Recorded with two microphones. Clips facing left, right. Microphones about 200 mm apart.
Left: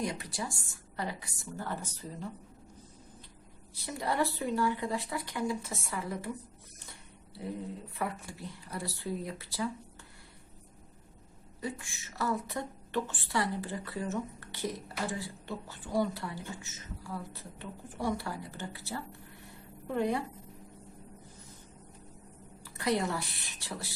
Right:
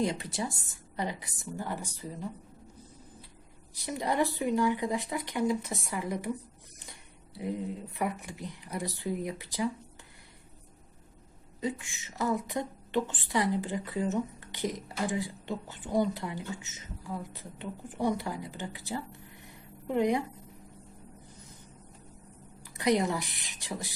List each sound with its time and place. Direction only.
0.0 s a woman's voice: 25° right (ahead or behind)
3.8 s a woman's voice: 15° right (ahead or behind)
7.3 s a woman's voice: 15° right (ahead or behind)
11.6 s a woman's voice: 20° right (ahead or behind)
22.6 s a woman's voice: 15° right (ahead or behind)